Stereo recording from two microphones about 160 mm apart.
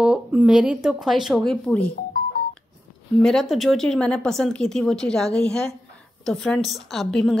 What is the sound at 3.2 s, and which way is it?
A woman's voice, centre (ahead or behind).